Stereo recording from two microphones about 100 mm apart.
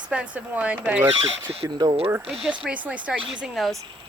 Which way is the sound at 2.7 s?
15° right (ahead or behind).